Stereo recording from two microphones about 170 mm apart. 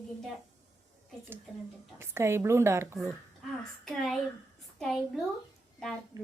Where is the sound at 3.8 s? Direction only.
Centre (ahead or behind).